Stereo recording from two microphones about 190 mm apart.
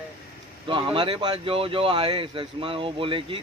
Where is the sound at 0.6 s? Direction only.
25° right (ahead or behind).